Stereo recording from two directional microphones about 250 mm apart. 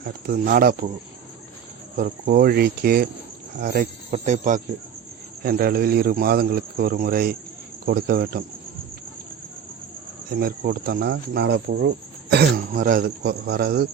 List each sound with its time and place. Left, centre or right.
0.0 s speech: right
2.0 s speech: right
10.2 s speech: right